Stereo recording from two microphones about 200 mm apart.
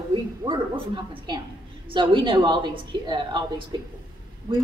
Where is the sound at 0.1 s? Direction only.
25° right (ahead or behind).